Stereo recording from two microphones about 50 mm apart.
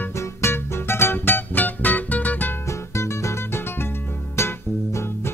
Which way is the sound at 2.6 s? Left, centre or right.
Left.